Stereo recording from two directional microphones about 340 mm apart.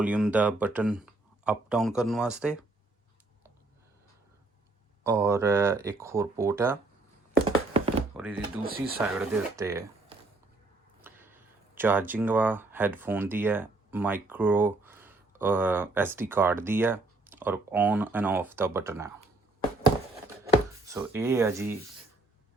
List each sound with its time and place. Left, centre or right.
0.0 s speech: centre
5.0 s speech: centre
7.7 s thunk: centre
8.1 s a sound: centre
9.0 s speech: centre
20.4 s drawer open or close: centre